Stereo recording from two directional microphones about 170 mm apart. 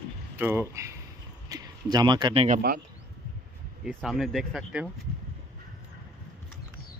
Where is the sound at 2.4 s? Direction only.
60° right (ahead or behind).